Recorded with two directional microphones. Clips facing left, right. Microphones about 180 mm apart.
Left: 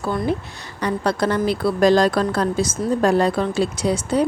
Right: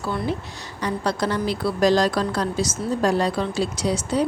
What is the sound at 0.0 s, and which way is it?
Speech, 55° left (ahead or behind).